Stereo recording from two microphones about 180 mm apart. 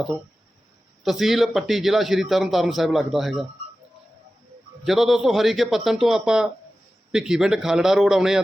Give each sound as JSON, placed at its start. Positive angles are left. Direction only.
{"t": 1.0, "sound": "speech", "side_deg": 0}
{"t": 4.9, "sound": "speech", "side_deg": 0}